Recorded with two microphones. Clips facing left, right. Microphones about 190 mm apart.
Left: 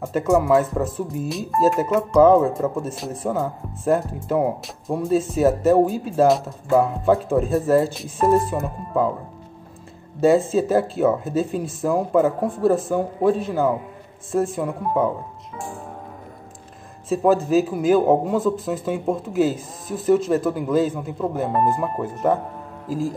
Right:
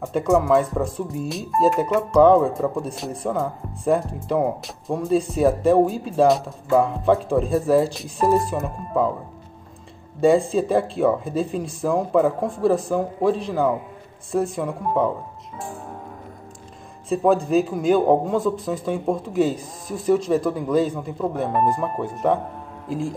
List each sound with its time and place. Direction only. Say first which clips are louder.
0.0 s speech: even; centre (ahead or behind)
10.2 s speech: even; 5° left (ahead or behind)
17.1 s speech: left 1 dB; centre (ahead or behind)